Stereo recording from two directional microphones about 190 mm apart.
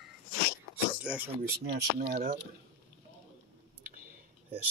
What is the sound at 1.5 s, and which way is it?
Speech, 55° right (ahead or behind).